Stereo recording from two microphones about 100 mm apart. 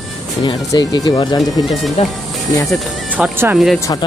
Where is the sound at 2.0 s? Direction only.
90° left.